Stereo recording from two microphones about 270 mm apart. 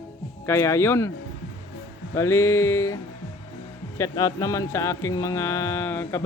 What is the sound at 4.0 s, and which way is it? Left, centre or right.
A man's voice, centre.